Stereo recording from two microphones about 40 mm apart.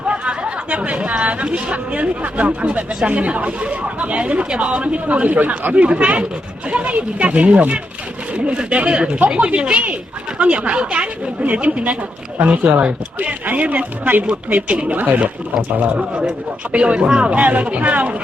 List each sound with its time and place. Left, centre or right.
0.1 s chatter: right
0.7 s speech: right
5.7 s speech: right
14.5 s speech: right
16.7 s speech: right